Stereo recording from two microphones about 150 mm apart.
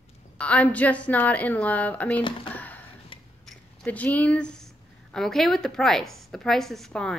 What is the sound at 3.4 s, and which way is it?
Speech, 10° left (ahead or behind).